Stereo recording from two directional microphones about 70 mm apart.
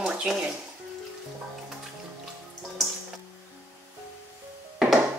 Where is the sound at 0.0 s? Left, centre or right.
Centre.